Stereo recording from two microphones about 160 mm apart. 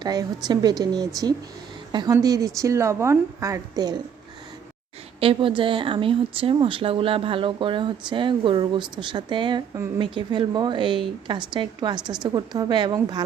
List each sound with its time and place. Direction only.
0.0 s a woman's voice: 25° right (ahead or behind)
5.2 s a woman's voice: 35° right (ahead or behind)